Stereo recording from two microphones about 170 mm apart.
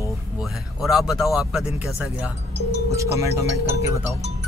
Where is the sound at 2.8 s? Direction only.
15° right (ahead or behind).